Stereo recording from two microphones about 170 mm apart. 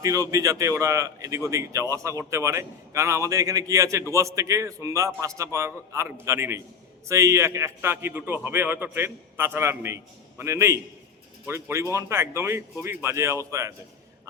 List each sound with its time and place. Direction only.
0.0 s a man's voice: 20° right (ahead or behind)